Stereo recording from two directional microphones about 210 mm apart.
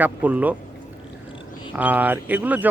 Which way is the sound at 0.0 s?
5° right (ahead or behind).